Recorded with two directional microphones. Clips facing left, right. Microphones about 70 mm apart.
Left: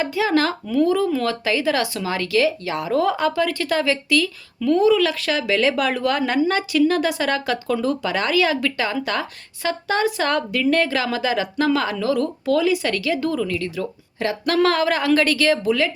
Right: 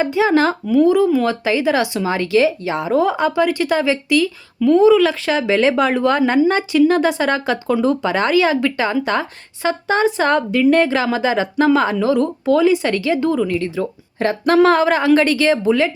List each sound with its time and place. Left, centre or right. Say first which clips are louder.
0.0 s speech: right 5 dB; right